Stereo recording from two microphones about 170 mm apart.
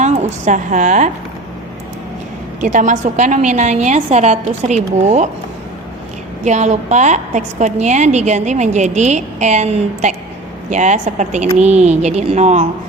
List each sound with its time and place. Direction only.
0.4 s a woman's voice: 50° right (ahead or behind)
2.6 s a woman's voice: 45° right (ahead or behind)
6.4 s a woman's voice: 45° right (ahead or behind)